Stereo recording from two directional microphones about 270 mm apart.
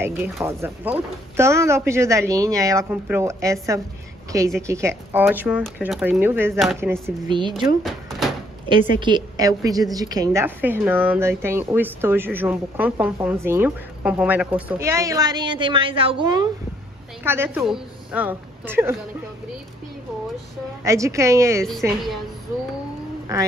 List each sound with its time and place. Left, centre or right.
0.0 s speech: centre
4.6 s speech: centre
7.2 s speech: centre
7.8 s door: centre
8.9 s a woman's voice: centre
20.8 s speech: centre
21.8 s a woman's voice: centre
23.3 s speech: centre